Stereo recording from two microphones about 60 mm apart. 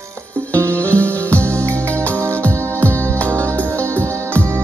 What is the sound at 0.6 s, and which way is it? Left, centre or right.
Music, left.